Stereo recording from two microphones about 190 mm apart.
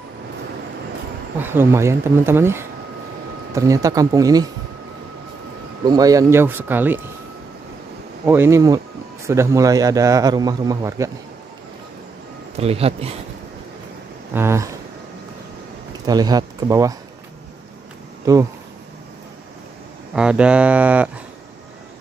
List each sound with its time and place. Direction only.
1.4 s speech: 10° right (ahead or behind)
5.9 s speech: 20° right (ahead or behind)
8.3 s speech: 15° right (ahead or behind)
12.5 s a man's voice: 30° right (ahead or behind)
14.3 s speech: 15° right (ahead or behind)
16.1 s speech: 20° right (ahead or behind)
18.2 s speech: 15° right (ahead or behind)
20.2 s speech: 5° right (ahead or behind)